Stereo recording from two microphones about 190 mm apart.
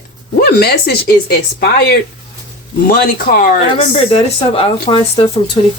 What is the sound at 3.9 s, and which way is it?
Speech, 30° left (ahead or behind).